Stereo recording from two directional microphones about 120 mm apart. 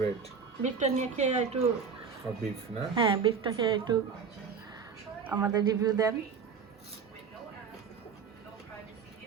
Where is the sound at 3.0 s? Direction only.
45° right (ahead or behind).